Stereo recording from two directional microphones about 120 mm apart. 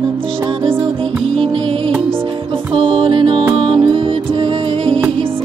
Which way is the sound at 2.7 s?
45° right (ahead or behind).